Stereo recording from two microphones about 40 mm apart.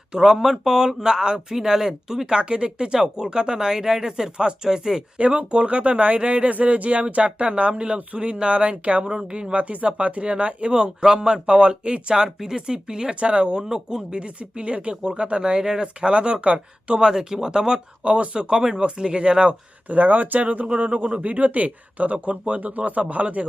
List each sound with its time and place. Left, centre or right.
0.1 s speech: centre
5.1 s speech: right
12.1 s speech: centre
17.0 s speech: centre
18.0 s speech: right
19.9 s speech: right